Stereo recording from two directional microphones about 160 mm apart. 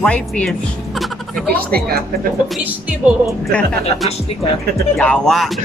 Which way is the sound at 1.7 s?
70° right (ahead or behind).